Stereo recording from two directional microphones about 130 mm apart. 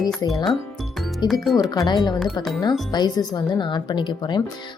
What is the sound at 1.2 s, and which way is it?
Speech, 35° left (ahead or behind).